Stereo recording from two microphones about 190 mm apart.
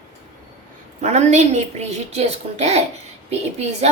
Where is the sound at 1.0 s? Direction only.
35° right (ahead or behind).